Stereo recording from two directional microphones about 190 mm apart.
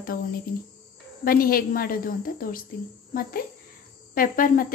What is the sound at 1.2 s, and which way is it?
Speech, 50° left (ahead or behind).